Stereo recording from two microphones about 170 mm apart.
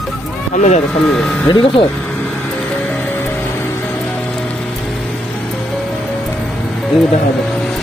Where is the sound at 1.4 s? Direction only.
30° left (ahead or behind).